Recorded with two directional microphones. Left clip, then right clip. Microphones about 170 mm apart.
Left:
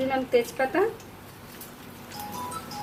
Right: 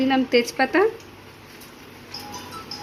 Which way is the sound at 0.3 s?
45° right (ahead or behind).